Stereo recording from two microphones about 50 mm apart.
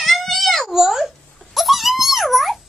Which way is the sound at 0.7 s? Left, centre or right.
Centre.